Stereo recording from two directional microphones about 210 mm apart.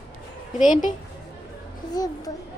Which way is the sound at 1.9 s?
20° left (ahead or behind).